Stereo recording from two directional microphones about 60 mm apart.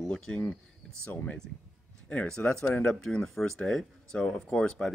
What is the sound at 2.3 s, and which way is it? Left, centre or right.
Speech, centre.